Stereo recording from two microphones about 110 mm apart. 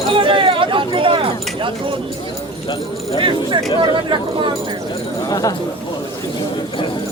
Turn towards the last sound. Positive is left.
turn(degrees=35)  # may be behind; listen again after turning